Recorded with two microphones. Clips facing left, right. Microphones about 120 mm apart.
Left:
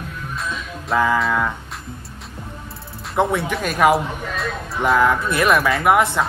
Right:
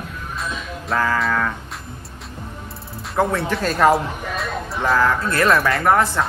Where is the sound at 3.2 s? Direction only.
20° left (ahead or behind).